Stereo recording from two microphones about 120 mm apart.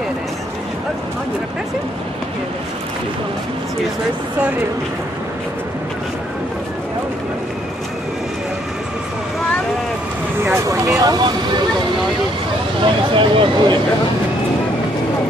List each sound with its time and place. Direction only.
10.4 s speech: 25° right (ahead or behind)
13.1 s speech: 45° right (ahead or behind)